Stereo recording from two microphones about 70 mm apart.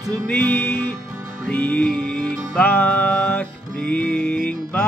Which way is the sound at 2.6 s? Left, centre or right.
Left.